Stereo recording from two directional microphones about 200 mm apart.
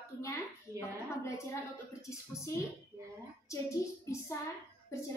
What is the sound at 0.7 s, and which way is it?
Speech, 15° right (ahead or behind).